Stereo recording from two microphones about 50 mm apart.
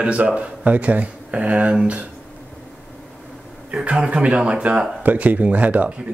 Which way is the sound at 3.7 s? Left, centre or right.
Right.